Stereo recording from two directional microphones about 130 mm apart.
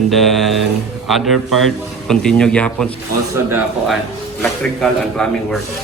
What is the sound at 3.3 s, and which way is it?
Speech, 15° right (ahead or behind).